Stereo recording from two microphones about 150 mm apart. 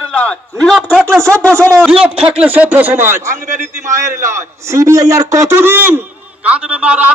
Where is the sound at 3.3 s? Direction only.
60° right (ahead or behind).